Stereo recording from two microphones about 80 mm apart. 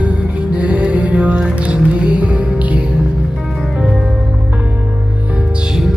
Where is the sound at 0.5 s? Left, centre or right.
Centre.